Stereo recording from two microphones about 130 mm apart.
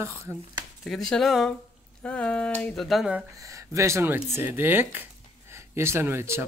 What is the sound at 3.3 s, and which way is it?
Speech, 25° right (ahead or behind).